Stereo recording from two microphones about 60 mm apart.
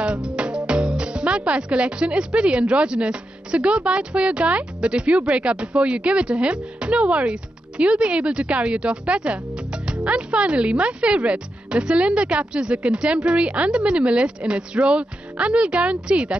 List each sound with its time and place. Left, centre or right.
0.0 s speech: centre